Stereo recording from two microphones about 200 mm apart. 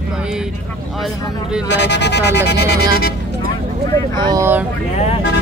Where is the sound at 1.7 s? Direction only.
60° left (ahead or behind).